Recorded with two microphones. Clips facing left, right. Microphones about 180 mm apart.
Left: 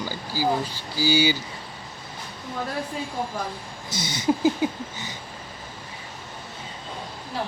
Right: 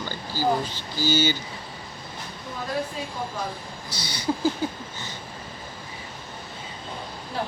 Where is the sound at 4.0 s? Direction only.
20° left (ahead or behind).